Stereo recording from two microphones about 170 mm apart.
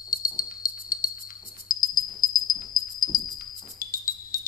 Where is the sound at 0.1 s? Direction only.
55° left (ahead or behind).